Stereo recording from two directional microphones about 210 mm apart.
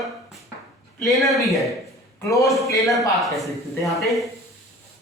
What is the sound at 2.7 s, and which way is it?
Speech, 15° left (ahead or behind).